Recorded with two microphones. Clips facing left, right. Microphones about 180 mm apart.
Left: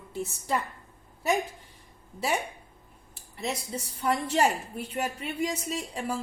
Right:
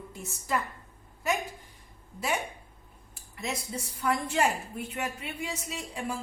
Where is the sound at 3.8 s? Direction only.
35° left (ahead or behind).